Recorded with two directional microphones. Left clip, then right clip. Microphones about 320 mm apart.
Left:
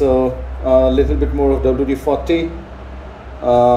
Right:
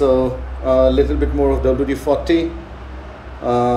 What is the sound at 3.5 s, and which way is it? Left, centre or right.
Speech, centre.